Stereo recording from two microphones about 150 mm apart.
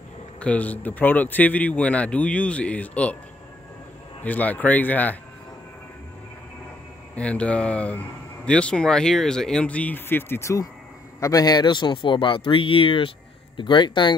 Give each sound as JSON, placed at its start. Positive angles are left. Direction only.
{"t": 0.4, "sound": "speech", "side_deg": 10}
{"t": 4.2, "sound": "speech", "side_deg": 10}
{"t": 7.2, "sound": "speech", "side_deg": 10}